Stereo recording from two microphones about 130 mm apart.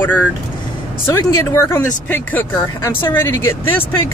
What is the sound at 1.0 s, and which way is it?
Speech, 20° left (ahead or behind).